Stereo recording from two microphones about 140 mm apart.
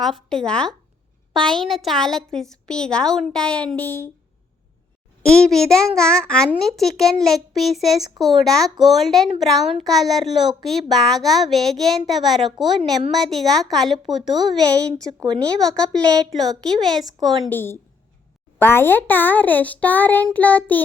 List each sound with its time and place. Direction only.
0.0 s a woman's voice: centre (ahead or behind)
5.3 s a woman's voice: 5° left (ahead or behind)
17.5 s a child's voice: 15° left (ahead or behind)